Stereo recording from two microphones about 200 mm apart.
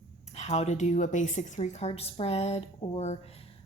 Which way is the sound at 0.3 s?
35° left (ahead or behind).